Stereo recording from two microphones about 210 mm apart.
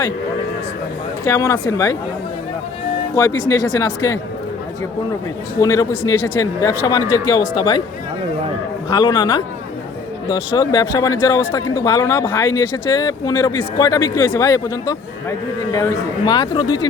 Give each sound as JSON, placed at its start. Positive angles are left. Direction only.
{"t": 1.2, "sound": "speech", "side_deg": 15}
{"t": 3.2, "sound": "speech", "side_deg": 15}
{"t": 5.5, "sound": "speech", "side_deg": 15}
{"t": 8.9, "sound": "speech", "side_deg": 20}